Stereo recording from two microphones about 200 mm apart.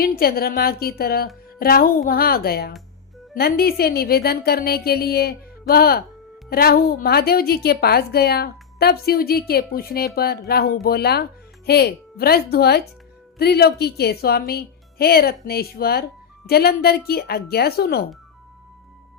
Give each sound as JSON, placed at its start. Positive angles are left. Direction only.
{"t": 0.0, "sound": "a woman's voice", "side_deg": 50}